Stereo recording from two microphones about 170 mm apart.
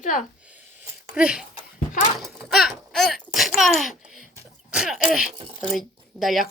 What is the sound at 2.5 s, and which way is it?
Speech, centre (ahead or behind).